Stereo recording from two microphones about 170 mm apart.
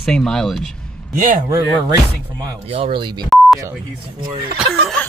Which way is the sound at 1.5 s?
20° right (ahead or behind).